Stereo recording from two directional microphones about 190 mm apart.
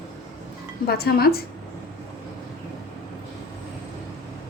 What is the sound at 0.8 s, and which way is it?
Speech, 55° left (ahead or behind).